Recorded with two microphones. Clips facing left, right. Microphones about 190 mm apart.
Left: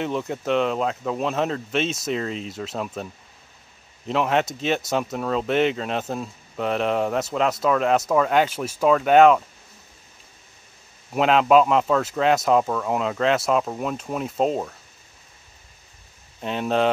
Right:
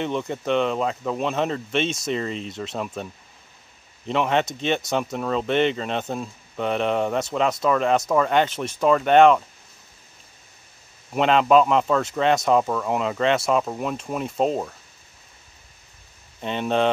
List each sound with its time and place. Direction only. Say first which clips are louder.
0.0 s speech: even; 5° left (ahead or behind)
4.1 s speech: even; centre (ahead or behind)
11.1 s speech: even; 5° left (ahead or behind)
16.3 s speech: even; centre (ahead or behind)